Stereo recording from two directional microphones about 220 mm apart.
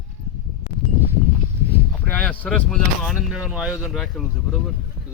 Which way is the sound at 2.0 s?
5° left (ahead or behind).